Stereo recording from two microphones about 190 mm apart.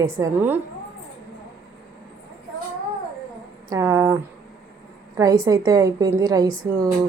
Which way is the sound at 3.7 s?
15° right (ahead or behind).